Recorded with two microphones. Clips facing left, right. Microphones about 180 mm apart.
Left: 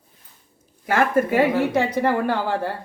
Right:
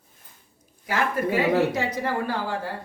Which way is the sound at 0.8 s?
50° left (ahead or behind).